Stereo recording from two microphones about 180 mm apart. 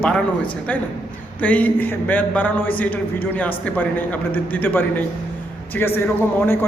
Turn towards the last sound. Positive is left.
turn(degrees=10)  # may be behind; listen again after turning